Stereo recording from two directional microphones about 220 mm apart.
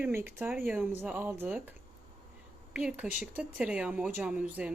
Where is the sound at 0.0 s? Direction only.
10° right (ahead or behind).